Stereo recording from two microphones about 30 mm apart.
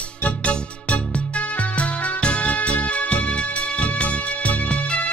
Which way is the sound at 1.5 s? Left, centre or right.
Left.